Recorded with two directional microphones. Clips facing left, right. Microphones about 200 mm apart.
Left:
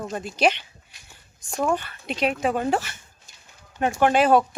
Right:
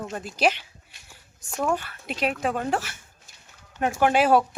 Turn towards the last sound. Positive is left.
turn(degrees=-5)  # may be behind; listen again after turning